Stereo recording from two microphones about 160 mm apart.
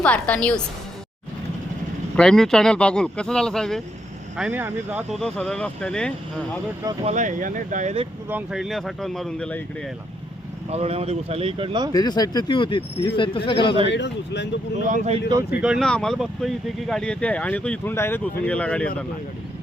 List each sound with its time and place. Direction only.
0.0 s speech: 10° left (ahead or behind)
2.1 s speech: 5° left (ahead or behind)
4.4 s speech: 10° right (ahead or behind)
5.2 s speech: centre (ahead or behind)
7.0 s speech: 50° right (ahead or behind)
8.3 s speech: 5° right (ahead or behind)
10.7 s speech: 40° right (ahead or behind)
11.9 s speech: 25° left (ahead or behind)
13.8 s speech: 90° left
14.8 s speech: 50° right (ahead or behind)
15.6 s speech: 5° right (ahead or behind)